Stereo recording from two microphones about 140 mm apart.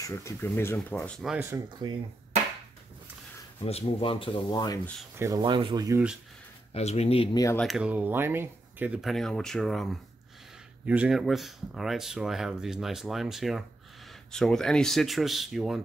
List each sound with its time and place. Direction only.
0.0 s speech: 20° left (ahead or behind)
1.5 s speech: 20° right (ahead or behind)
3.6 s speech: 45° left (ahead or behind)
5.1 s speech: 20° right (ahead or behind)
5.4 s speech: 35° right (ahead or behind)
6.7 s speech: 50° left (ahead or behind)
7.5 s speech: centre (ahead or behind)
9.0 s speech: centre (ahead or behind)